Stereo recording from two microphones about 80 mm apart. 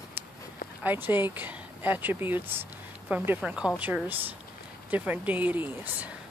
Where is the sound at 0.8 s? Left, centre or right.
Right.